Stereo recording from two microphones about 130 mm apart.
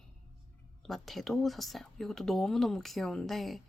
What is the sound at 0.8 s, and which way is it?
Speech, centre (ahead or behind).